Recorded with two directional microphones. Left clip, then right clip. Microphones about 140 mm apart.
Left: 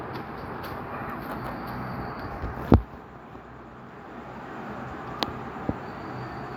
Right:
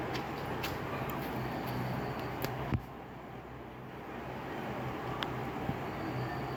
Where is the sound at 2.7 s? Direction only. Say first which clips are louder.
Left 18 dB; 30° left (ahead or behind).